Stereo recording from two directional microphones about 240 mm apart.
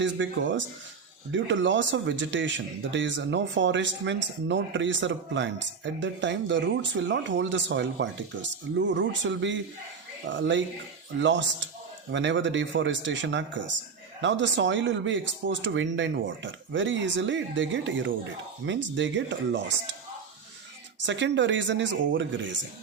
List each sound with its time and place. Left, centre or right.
0.0 s speech: right
21.0 s speech: right